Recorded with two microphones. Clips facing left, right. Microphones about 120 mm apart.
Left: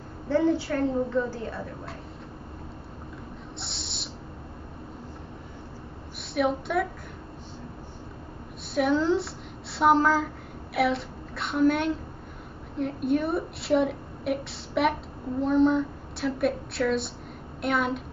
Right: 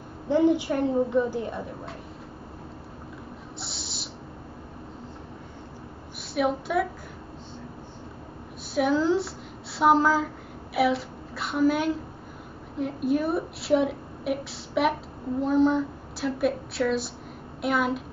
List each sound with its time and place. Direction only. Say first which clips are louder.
0.3 s a woman's voice: right 2 dB; 15° right (ahead or behind)
3.5 s a sound: right 1 dB; centre (ahead or behind)
6.3 s a woman's voice: right 1 dB; centre (ahead or behind)
8.7 s a woman's voice: right 1 dB; centre (ahead or behind)